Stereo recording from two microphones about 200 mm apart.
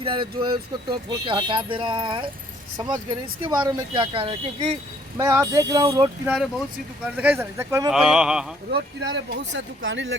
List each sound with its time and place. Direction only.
0.0 s speech: 25° right (ahead or behind)
6.2 s speech: 5° right (ahead or behind)
7.9 s a sound: 5° right (ahead or behind)
8.7 s speech: 60° right (ahead or behind)